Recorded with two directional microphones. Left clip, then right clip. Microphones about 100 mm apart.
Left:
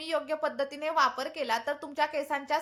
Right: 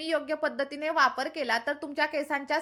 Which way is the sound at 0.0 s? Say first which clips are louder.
Right 2 dB; 30° right (ahead or behind).